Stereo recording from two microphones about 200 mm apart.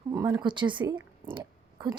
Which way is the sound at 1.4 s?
20° right (ahead or behind).